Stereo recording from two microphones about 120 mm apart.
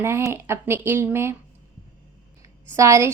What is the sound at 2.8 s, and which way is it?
Speech, 25° right (ahead or behind).